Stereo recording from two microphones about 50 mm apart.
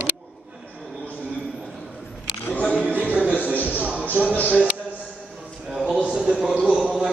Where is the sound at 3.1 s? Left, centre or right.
Right.